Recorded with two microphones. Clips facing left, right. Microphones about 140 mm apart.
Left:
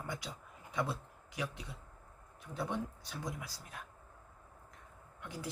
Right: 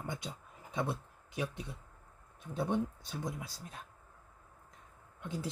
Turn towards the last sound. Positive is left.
turn(degrees=-25)  # may be behind; listen again after turning